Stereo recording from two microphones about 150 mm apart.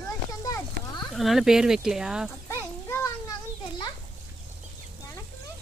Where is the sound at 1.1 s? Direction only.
Centre (ahead or behind).